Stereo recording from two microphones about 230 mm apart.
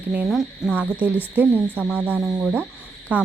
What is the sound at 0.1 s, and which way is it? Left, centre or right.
Speech, centre.